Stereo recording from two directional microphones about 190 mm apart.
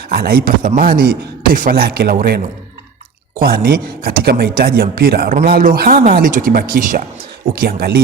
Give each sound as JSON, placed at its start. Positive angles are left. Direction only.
{"t": 0.1, "sound": "speech", "side_deg": -50}